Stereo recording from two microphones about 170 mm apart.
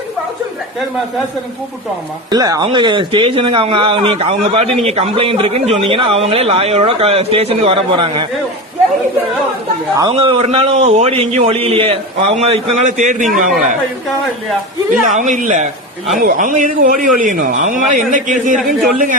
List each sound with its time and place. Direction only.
2.3 s speech: 25° right (ahead or behind)
10.1 s speech: 35° right (ahead or behind); by 13.5 s 50° right (ahead or behind)
15.0 s a man's voice: 45° right (ahead or behind)